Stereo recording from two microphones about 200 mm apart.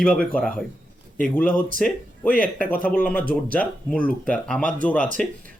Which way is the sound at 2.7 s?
45° left (ahead or behind).